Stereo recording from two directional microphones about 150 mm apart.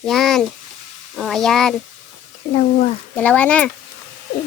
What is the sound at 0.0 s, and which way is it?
Speech, centre (ahead or behind).